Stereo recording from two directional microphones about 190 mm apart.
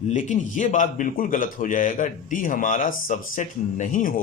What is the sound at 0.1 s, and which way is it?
A man's voice, 40° left (ahead or behind).